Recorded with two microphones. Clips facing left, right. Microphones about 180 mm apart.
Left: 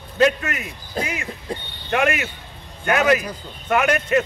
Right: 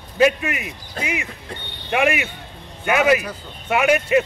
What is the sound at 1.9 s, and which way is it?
Speech, 10° right (ahead or behind).